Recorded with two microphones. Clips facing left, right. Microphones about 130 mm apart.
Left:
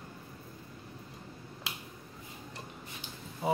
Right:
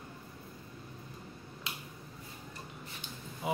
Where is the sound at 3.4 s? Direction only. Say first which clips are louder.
Left 4 dB; 30° left (ahead or behind).